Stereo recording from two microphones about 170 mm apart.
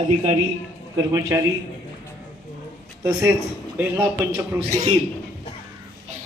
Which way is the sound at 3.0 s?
10° right (ahead or behind).